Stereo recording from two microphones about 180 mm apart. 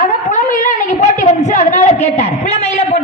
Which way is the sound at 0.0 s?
45° left (ahead or behind).